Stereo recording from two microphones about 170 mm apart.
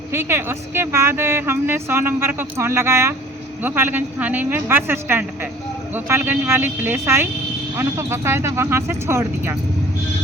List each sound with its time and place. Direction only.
0.1 s a woman's voice: 15° right (ahead or behind)